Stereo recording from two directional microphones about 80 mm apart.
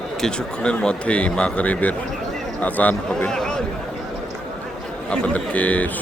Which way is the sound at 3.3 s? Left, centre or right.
Centre.